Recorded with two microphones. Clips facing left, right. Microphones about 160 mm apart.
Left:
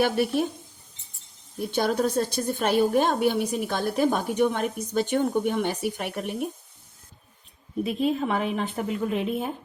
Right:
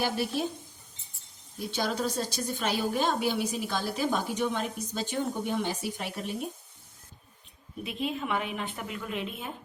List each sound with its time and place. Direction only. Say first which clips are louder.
0.0 s a woman's voice: left 7 dB; 60° left (ahead or behind)
1.5 s a woman's voice: left 6 dB; 55° left (ahead or behind)
7.9 s speech: left 6 dB; 40° left (ahead or behind)